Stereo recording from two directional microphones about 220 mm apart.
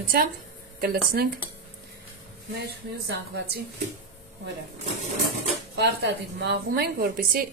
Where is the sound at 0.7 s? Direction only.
45° right (ahead or behind).